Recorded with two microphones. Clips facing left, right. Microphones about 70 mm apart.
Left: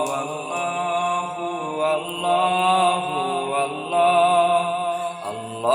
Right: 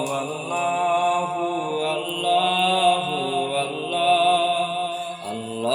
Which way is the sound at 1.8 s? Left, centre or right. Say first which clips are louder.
Left 3 dB; left.